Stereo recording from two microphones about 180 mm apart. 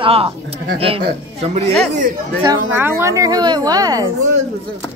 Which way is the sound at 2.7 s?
15° right (ahead or behind).